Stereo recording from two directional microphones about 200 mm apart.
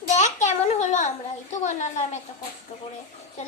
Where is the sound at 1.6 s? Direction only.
35° left (ahead or behind).